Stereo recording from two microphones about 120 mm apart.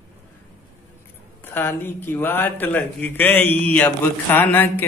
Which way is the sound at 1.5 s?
20° left (ahead or behind).